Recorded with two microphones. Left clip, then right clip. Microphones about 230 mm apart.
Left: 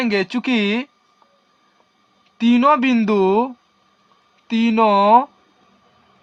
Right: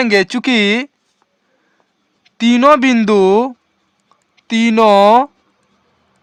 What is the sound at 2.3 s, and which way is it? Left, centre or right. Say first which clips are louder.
Speech: right 5 dB; right.